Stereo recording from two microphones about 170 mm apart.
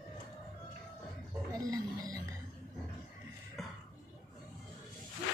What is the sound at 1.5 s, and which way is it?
Music, 20° right (ahead or behind).